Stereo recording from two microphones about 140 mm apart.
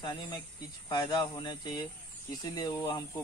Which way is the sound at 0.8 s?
30° left (ahead or behind).